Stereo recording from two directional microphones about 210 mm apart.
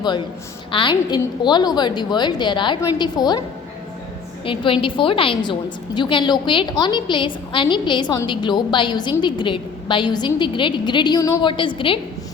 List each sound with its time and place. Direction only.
0.7 s a woman's voice: 25° left (ahead or behind)
4.4 s a woman's voice: 25° left (ahead or behind)